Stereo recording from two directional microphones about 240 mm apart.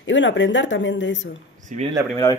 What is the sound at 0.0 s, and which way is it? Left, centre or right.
Speech, left.